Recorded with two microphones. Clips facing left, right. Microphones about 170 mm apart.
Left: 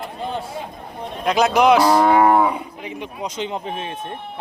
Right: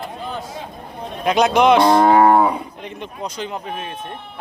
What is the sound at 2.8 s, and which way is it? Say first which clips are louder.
Speech: left 1 dB; 5° left (ahead or behind).